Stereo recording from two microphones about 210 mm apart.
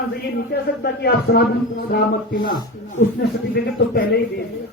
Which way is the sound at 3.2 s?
50° left (ahead or behind).